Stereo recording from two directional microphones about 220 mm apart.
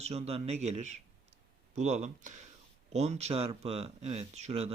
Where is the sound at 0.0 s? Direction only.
30° right (ahead or behind).